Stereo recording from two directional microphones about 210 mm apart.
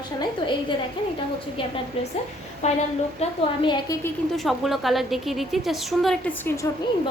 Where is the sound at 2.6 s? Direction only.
30° left (ahead or behind).